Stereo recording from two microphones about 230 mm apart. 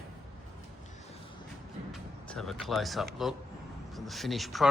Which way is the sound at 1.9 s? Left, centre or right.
Centre.